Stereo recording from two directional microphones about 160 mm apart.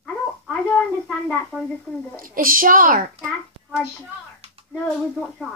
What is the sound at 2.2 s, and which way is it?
Speech, 60° right (ahead or behind).